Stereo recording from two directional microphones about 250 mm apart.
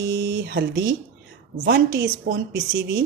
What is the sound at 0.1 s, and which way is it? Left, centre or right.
Speech, right.